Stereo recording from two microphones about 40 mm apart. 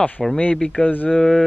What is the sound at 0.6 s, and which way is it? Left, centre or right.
Speech, left.